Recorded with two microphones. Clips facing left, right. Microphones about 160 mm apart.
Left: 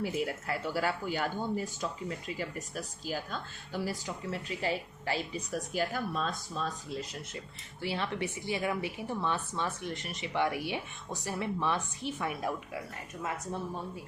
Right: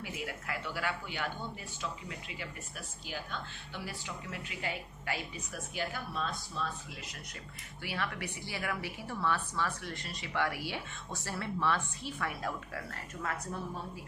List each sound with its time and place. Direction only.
0.0 s a woman's voice: 30° left (ahead or behind); by 12.8 s 15° left (ahead or behind)